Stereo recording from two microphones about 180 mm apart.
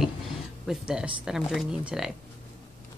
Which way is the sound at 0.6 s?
5° right (ahead or behind).